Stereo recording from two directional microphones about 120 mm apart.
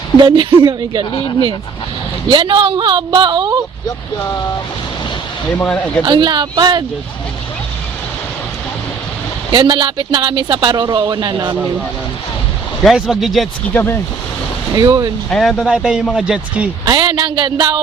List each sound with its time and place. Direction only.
0.2 s speech: 40° right (ahead or behind)
2.3 s speech: 45° right (ahead or behind)
5.5 s speech: 10° left (ahead or behind)
6.1 s speech: 40° right (ahead or behind)
9.5 s speech: 40° right (ahead or behind)
12.8 s speech: centre (ahead or behind)
13.7 s speech: 20° left (ahead or behind)
14.8 s speech: 30° right (ahead or behind)
15.3 s speech: centre (ahead or behind)
16.8 s speech: 40° right (ahead or behind)